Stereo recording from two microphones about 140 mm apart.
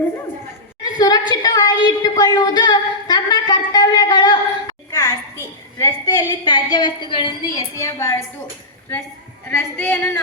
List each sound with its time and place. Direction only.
0.9 s a sound: 30° left (ahead or behind)
6.4 s a woman's voice: 30° left (ahead or behind)
9.5 s a woman's voice: 15° left (ahead or behind)